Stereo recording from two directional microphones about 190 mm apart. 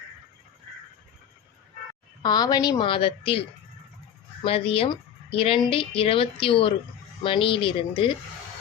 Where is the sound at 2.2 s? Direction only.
20° left (ahead or behind).